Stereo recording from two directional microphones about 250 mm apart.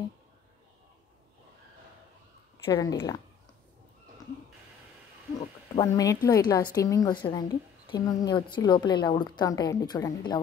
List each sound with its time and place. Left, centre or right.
2.5 s speech: centre
5.4 s a woman's voice: centre